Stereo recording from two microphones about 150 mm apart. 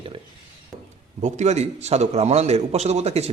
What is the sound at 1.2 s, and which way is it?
A man's voice, 50° right (ahead or behind).